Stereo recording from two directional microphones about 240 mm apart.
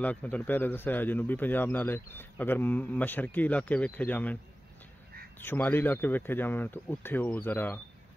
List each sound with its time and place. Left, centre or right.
0.0 s speech: centre
5.4 s speech: centre